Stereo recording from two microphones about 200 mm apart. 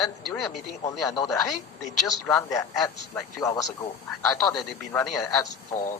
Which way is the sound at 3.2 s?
15° left (ahead or behind).